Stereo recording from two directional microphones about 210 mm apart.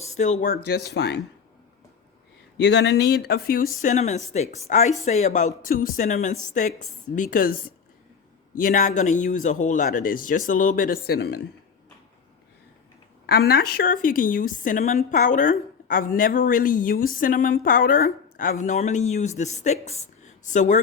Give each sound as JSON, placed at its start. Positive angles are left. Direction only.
{"t": 0.0, "sound": "a woman's voice", "side_deg": 35}
{"t": 2.6, "sound": "a woman's voice", "side_deg": 55}
{"t": 13.2, "sound": "a woman's voice", "side_deg": 50}